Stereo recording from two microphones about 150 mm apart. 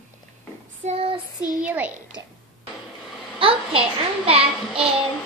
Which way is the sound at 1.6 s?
10° right (ahead or behind).